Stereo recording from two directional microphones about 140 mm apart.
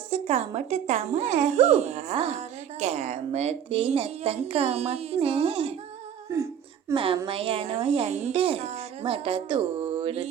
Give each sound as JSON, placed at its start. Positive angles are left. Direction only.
{"t": 0.1, "sound": "speech", "side_deg": -50}
{"t": 6.3, "sound": "a sound", "side_deg": -20}
{"t": 6.9, "sound": "speech", "side_deg": -40}